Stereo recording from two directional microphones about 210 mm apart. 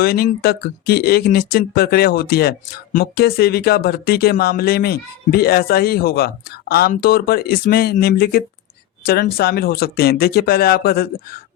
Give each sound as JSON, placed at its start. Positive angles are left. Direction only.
{"t": 0.0, "sound": "speech", "side_deg": 45}